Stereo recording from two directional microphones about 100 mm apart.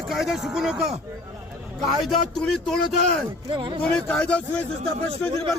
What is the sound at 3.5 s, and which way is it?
Speech, 55° right (ahead or behind).